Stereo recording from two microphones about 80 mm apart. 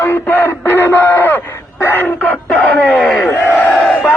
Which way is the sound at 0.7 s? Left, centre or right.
Left.